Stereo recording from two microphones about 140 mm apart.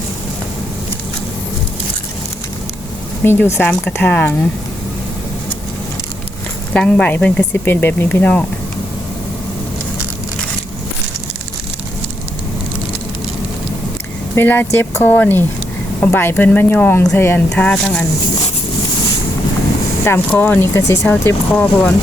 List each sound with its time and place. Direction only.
3.2 s speech: 15° left (ahead or behind)
6.7 s speech: 10° left (ahead or behind)
14.3 s speech: 15° left (ahead or behind)
20.1 s speech: 15° left (ahead or behind)